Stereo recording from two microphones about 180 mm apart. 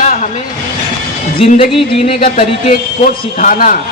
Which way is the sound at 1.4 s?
30° left (ahead or behind).